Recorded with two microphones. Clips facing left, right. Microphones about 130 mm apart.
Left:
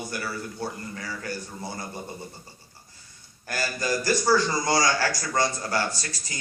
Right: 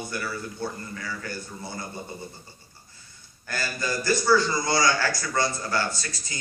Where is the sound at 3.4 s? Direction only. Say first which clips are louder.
Left 2 dB; 35° left (ahead or behind).